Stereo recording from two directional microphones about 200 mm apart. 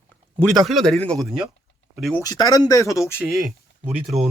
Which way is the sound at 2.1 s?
20° left (ahead or behind).